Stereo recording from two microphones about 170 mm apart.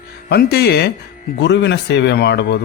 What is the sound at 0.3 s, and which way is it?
Speech, 70° left (ahead or behind).